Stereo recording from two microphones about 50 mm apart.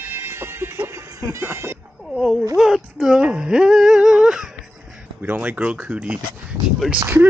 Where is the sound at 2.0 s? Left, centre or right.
Centre.